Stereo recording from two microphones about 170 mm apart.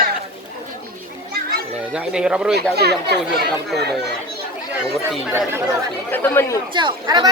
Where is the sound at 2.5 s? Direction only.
75° right (ahead or behind).